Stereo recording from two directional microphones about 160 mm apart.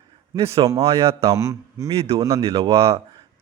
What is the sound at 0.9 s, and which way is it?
Speech, 40° right (ahead or behind).